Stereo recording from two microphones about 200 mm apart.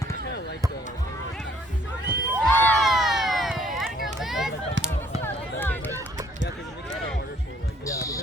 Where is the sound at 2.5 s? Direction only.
5° left (ahead or behind).